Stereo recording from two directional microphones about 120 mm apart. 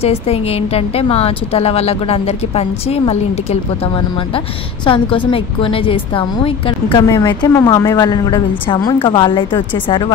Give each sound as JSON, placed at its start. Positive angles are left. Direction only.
{"t": 0.0, "sound": "a woman's voice", "side_deg": 55}
{"t": 4.8, "sound": "a woman's voice", "side_deg": 45}